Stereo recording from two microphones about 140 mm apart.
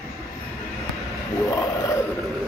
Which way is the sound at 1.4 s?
25° left (ahead or behind).